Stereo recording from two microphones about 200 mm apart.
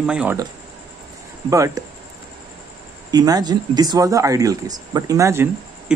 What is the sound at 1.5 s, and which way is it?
Speech, 15° right (ahead or behind).